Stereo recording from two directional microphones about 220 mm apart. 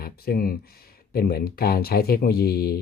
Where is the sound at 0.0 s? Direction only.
45° left (ahead or behind).